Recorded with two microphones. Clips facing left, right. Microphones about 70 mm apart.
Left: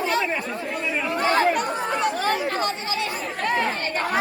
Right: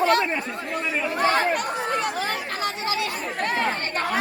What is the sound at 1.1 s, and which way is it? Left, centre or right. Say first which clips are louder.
Speech: even; centre.